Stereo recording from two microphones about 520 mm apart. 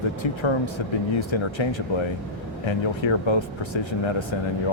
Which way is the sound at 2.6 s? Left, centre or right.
Left.